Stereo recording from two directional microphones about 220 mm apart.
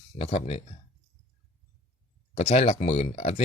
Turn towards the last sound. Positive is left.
turn(degrees=30)  # may be behind; listen again after turning